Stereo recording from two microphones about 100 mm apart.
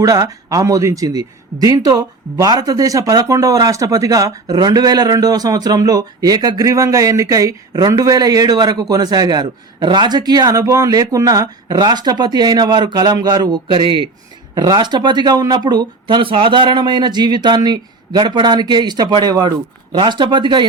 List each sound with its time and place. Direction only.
0.0 s speech: 35° right (ahead or behind); by 20.7 s 50° right (ahead or behind)